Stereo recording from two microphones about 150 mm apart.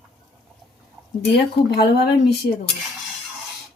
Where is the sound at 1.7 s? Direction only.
90° left.